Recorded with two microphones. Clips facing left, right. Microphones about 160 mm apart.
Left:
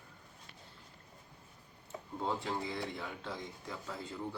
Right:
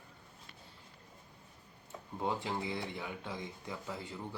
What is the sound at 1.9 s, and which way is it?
Tick-tock, 5° left (ahead or behind).